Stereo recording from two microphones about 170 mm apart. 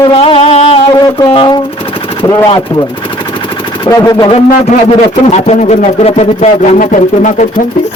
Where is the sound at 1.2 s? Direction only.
30° left (ahead or behind).